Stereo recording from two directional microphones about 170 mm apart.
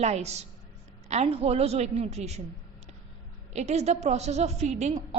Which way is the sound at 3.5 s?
40° right (ahead or behind).